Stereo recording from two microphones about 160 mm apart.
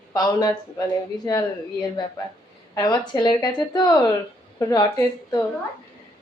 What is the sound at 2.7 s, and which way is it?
Speech, 25° left (ahead or behind).